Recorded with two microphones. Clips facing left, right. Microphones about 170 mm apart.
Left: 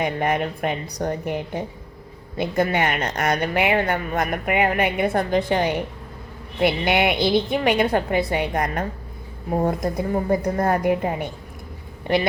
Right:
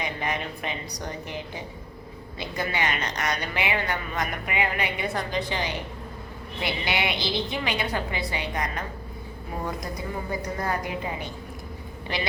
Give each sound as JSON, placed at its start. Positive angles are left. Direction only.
{"t": 0.0, "sound": "a woman's voice", "side_deg": 55}